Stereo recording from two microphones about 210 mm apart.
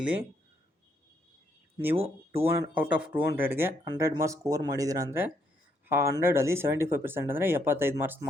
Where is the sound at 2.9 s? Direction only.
5° right (ahead or behind).